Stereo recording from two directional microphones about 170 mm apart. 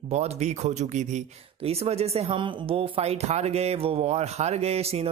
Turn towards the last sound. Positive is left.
turn(degrees=-35)  # may be behind; listen again after turning